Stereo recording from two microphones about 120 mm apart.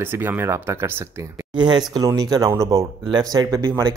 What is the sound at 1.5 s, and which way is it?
Speech, 40° right (ahead or behind).